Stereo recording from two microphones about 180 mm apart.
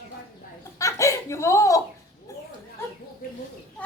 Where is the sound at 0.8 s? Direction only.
15° left (ahead or behind).